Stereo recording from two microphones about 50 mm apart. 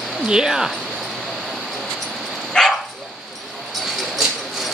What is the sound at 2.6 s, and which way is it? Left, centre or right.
Dog, centre.